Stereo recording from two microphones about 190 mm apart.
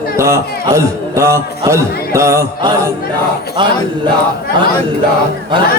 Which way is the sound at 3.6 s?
25° right (ahead or behind).